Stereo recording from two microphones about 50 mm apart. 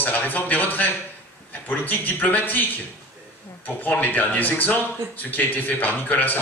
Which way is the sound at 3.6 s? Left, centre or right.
Left.